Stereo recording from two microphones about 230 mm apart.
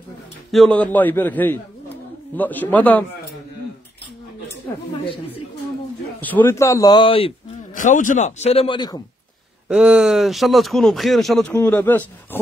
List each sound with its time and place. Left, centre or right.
0.5 s a man's voice: centre
5.0 s speech: left
6.2 s speech: centre
9.7 s speech: centre